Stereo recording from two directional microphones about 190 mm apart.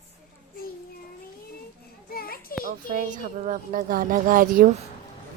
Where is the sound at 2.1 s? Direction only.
50° left (ahead or behind).